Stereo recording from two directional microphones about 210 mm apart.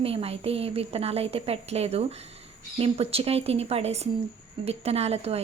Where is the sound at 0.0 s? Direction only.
30° right (ahead or behind).